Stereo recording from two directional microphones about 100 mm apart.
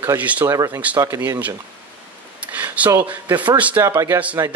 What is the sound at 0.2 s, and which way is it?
Speech, 15° right (ahead or behind).